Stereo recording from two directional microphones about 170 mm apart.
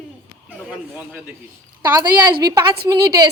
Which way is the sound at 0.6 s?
10° right (ahead or behind).